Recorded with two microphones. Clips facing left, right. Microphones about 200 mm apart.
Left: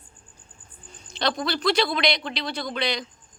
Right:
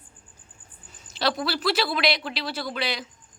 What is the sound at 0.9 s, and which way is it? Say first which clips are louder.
Speech: even; 5° right (ahead or behind).